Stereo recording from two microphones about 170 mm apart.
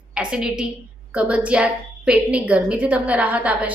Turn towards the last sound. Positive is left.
turn(degrees=-10)  # may be behind; listen again after turning